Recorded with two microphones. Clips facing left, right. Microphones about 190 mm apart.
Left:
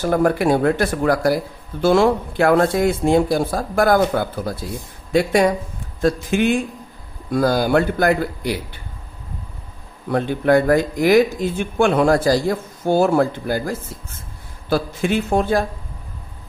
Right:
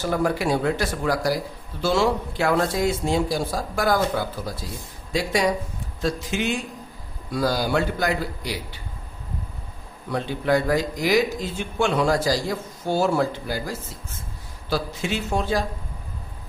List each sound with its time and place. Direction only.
0.0 s speech: 55° left (ahead or behind)
10.1 s speech: 55° left (ahead or behind)